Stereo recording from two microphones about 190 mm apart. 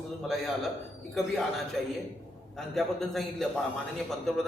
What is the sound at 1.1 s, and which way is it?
A man's voice, centre (ahead or behind).